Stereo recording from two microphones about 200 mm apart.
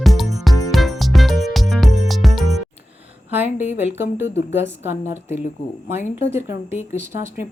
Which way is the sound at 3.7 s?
10° right (ahead or behind).